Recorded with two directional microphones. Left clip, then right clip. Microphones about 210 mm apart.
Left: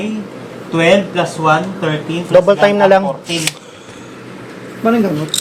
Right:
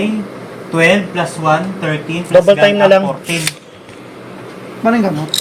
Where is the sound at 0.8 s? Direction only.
35° right (ahead or behind).